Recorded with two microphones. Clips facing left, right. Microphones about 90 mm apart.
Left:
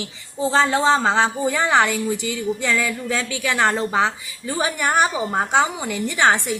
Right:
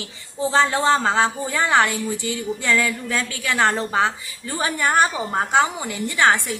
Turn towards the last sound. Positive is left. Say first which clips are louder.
# even
turn(degrees=20)  # may be behind; listen again after turning